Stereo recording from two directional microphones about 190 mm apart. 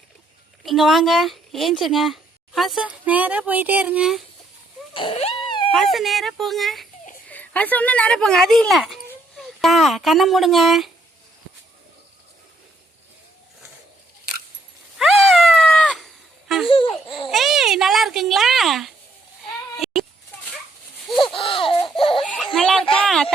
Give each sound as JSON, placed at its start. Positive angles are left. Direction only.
{"t": 0.6, "sound": "speech", "side_deg": 0}
{"t": 4.9, "sound": "a sound", "side_deg": 30}
{"t": 5.7, "sound": "speech", "side_deg": 0}
{"t": 14.9, "sound": "cat", "side_deg": 0}
{"t": 16.6, "sound": "laughter", "side_deg": 25}
{"t": 17.2, "sound": "cat", "side_deg": 0}
{"t": 19.7, "sound": "baby cry", "side_deg": 0}
{"t": 21.3, "sound": "laughter", "side_deg": 30}
{"t": 21.9, "sound": "baby laughter", "side_deg": 30}
{"t": 22.2, "sound": "giggle", "side_deg": 5}
{"t": 22.5, "sound": "a sound", "side_deg": 5}